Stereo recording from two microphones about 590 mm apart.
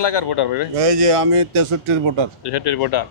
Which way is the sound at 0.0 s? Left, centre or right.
Left.